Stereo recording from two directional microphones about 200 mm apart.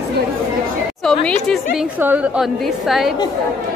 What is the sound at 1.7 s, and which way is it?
Speech, 5° right (ahead or behind).